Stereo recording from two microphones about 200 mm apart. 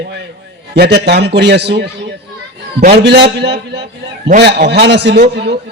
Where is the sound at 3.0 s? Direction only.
55° right (ahead or behind).